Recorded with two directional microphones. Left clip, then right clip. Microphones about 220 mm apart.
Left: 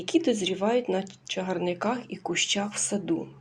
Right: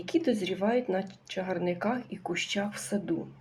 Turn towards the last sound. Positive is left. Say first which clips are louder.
# left 4 dB
turn(degrees=20)  # may be behind; listen again after turning